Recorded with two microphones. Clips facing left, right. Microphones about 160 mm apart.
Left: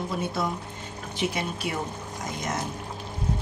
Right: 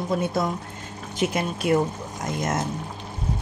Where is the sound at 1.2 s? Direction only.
50° right (ahead or behind).